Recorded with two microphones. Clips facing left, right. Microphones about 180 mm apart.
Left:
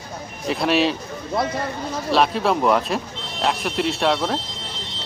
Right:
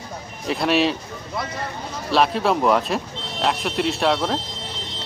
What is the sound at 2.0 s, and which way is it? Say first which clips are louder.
Speech: even; centre (ahead or behind).